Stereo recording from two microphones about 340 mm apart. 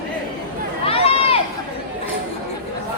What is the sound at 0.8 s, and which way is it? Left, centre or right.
Run, centre.